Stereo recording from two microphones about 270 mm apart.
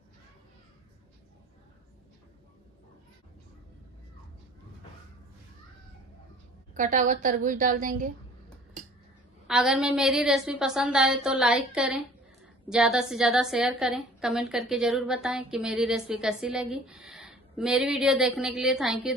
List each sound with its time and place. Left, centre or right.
6.7 s a woman's voice: right
9.5 s a woman's voice: centre